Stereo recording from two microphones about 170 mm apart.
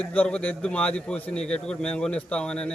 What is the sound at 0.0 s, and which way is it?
A man's voice, 5° left (ahead or behind).